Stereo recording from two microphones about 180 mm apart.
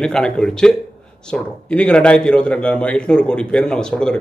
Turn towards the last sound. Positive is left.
turn(degrees=5)  # may be behind; listen again after turning